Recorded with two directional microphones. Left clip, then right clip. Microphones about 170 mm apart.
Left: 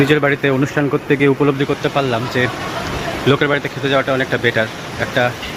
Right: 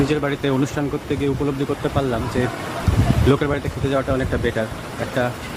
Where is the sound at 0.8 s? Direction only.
15° left (ahead or behind).